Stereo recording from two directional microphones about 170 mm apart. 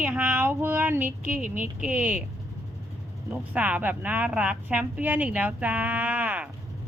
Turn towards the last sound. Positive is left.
turn(degrees=-10)  # may be behind; listen again after turning